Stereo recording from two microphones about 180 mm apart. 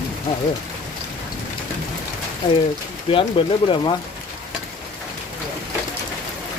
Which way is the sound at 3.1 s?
30° left (ahead or behind).